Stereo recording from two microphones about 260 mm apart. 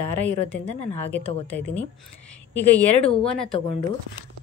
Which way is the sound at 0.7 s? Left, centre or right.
Left.